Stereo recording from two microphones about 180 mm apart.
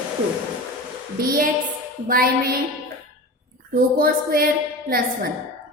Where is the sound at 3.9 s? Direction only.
55° right (ahead or behind).